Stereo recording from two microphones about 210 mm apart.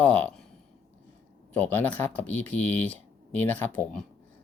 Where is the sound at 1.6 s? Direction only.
10° left (ahead or behind).